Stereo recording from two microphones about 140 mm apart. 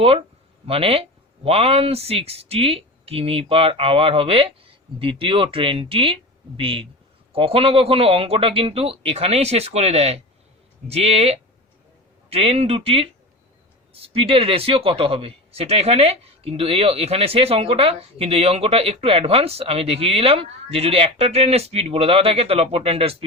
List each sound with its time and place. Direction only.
0.0 s a man's voice: 45° right (ahead or behind)